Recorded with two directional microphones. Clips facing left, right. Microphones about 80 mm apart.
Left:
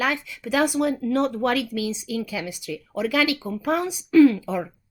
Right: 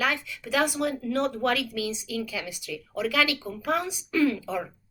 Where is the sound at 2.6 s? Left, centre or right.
Left.